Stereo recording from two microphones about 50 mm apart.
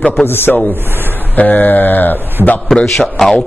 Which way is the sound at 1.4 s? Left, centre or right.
Left.